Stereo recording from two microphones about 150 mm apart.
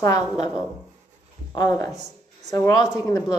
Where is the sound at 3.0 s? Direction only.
25° left (ahead or behind).